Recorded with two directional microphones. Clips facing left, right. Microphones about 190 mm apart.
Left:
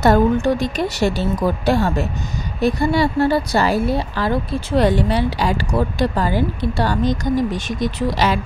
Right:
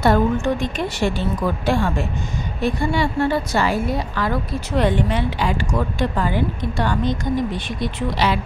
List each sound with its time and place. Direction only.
0.0 s a woman's voice: 40° left (ahead or behind)